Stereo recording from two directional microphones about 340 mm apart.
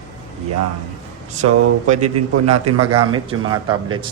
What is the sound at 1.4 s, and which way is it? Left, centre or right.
Speech, right.